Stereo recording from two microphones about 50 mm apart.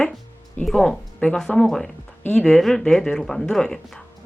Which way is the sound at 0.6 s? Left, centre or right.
Centre.